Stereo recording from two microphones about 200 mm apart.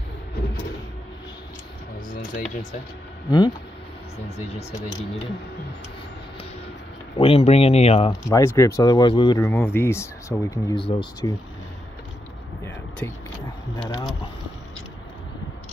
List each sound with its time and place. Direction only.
2.0 s a sound: 45° left (ahead or behind)
3.3 s speech: 20° left (ahead or behind)
4.5 s speech: 35° left (ahead or behind)
7.2 s speech: 30° left (ahead or behind)
8.1 s speech: 15° left (ahead or behind)
9.5 s speech: 10° left (ahead or behind)
10.8 s speech: 25° left (ahead or behind)
13.0 s speech: 15° left (ahead or behind)